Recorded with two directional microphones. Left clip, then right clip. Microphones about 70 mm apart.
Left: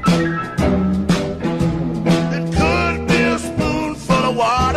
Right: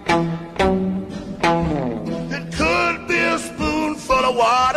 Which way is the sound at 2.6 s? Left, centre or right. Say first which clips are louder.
Even; right.